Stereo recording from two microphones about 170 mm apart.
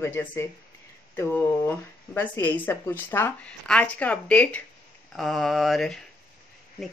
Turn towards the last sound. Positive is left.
turn(degrees=0)  # may be behind; listen again after turning